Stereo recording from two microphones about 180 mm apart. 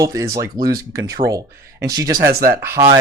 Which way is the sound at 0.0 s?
20° right (ahead or behind).